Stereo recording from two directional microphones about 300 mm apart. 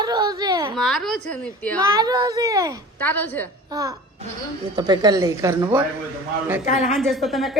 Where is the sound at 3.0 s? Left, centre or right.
Centre.